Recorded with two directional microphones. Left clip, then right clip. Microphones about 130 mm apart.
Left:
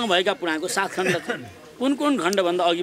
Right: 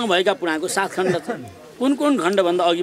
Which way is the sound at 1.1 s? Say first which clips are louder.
Right 1 dB; 40° left (ahead or behind).